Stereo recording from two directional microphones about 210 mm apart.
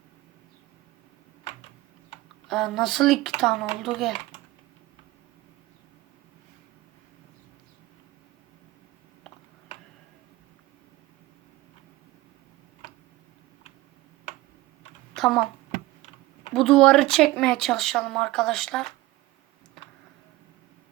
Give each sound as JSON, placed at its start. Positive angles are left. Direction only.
{"t": 2.5, "sound": "speech", "side_deg": 0}
{"t": 15.1, "sound": "typing", "side_deg": 0}
{"t": 16.5, "sound": "speech", "side_deg": 0}